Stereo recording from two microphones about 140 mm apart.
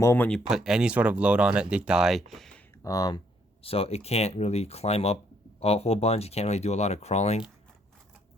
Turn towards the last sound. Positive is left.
turn(degrees=50)  # may be behind; listen again after turning